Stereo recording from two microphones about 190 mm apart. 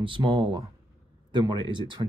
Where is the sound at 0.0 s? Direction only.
25° right (ahead or behind).